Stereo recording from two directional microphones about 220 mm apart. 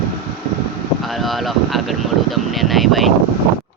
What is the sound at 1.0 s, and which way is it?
Speech, centre (ahead or behind).